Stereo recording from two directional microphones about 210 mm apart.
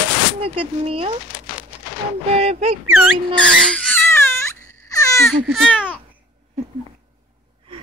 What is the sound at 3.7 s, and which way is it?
Baby cry, 5° left (ahead or behind).